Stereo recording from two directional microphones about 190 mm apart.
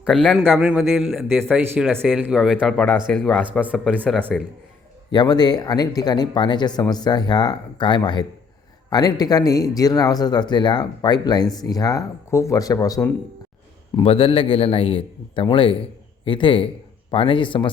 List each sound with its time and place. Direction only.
0.0 s a man's voice: centre (ahead or behind)
3.6 s speech: 5° right (ahead or behind)
5.1 s speech: 20° left (ahead or behind)
13.9 s speech: 30° left (ahead or behind)